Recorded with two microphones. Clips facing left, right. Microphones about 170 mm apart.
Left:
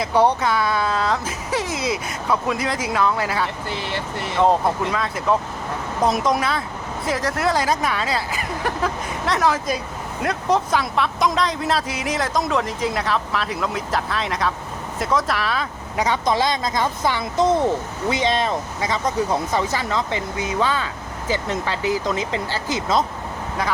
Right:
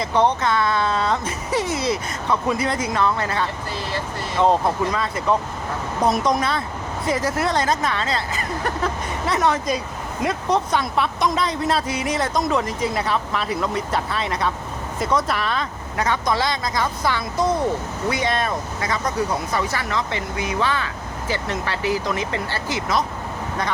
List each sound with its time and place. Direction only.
0.0 s speech: 10° left (ahead or behind)
3.7 s speech: 20° left (ahead or behind)
4.4 s speech: centre (ahead or behind)
16.0 s speech: 15° left (ahead or behind)